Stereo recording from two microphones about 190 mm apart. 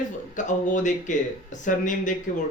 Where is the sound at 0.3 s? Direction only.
40° left (ahead or behind).